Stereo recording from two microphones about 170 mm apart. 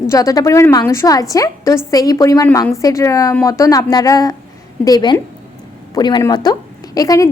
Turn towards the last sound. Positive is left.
turn(degrees=20)  # may be behind; listen again after turning